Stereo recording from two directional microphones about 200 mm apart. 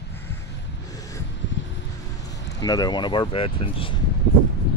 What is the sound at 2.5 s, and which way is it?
Speech, 20° left (ahead or behind).